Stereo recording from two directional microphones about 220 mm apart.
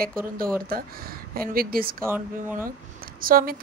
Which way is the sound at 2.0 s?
10° right (ahead or behind).